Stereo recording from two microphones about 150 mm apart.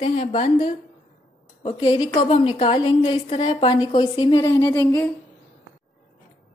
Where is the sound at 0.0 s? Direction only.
40° left (ahead or behind).